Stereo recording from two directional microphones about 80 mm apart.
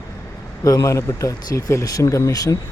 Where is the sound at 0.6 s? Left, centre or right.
Left.